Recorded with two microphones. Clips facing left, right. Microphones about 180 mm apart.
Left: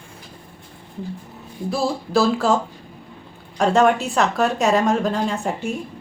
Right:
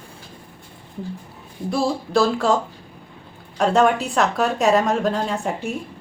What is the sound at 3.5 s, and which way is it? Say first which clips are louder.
A woman's voice: left 1 dB; centre (ahead or behind).